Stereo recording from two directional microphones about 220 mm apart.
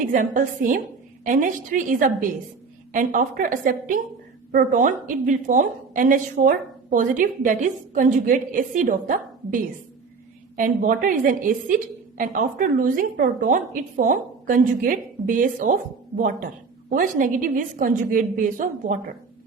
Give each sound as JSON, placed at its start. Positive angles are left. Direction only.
{"t": 0.0, "sound": "a woman's voice", "side_deg": -35}